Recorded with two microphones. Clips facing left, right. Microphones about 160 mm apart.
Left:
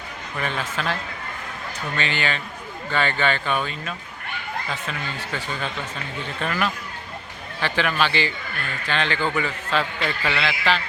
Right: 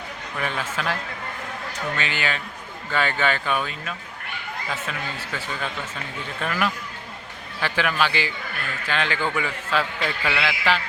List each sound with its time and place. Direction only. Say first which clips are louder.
0.3 s a man's voice: left 1 dB; 5° right (ahead or behind)
2.0 s a man's voice: left 5 dB; 10° right (ahead or behind)
6.4 s a man's voice: even; 5° right (ahead or behind)